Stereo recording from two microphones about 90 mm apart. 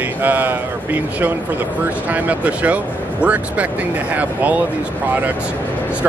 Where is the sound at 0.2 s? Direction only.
20° right (ahead or behind).